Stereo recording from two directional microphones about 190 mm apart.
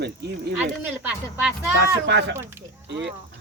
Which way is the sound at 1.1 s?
5° right (ahead or behind).